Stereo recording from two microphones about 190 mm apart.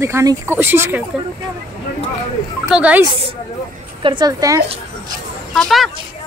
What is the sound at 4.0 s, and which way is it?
Speech, 25° right (ahead or behind).